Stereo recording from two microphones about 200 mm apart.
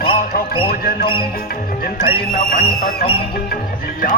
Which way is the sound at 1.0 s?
25° left (ahead or behind).